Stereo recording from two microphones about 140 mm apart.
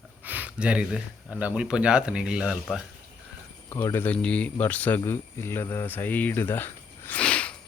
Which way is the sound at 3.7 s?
15° left (ahead or behind).